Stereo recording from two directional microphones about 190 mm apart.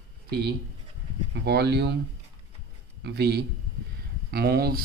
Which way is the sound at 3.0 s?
60° right (ahead or behind).